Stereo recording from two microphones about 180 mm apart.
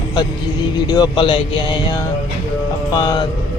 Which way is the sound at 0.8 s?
20° left (ahead or behind).